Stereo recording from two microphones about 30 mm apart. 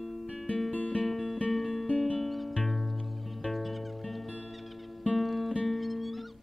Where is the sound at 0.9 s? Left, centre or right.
Centre.